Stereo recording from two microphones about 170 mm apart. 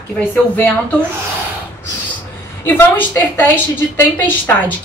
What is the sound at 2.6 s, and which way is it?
Speech, 10° left (ahead or behind).